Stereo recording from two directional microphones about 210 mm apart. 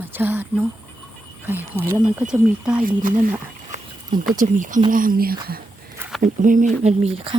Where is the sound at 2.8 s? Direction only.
40° right (ahead or behind).